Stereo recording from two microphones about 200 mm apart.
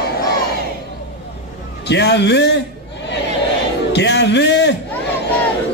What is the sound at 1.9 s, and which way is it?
Speech, 60° left (ahead or behind).